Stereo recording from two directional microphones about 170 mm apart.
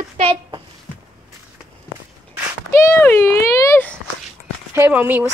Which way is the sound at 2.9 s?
15° left (ahead or behind).